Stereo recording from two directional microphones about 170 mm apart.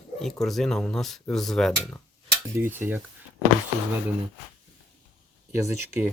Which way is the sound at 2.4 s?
15° right (ahead or behind).